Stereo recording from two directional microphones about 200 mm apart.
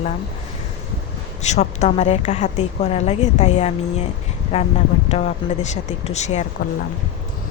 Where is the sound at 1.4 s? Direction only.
35° left (ahead or behind).